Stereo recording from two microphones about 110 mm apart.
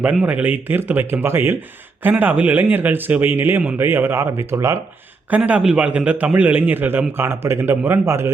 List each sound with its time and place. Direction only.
0.0 s a man's voice: 10° right (ahead or behind)
5.3 s a man's voice: 10° right (ahead or behind)